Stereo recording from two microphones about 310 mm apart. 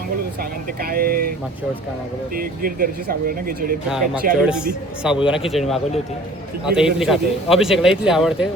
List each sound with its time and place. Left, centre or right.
0.8 s speech: right
2.3 s speech: right
4.4 s a man's voice: centre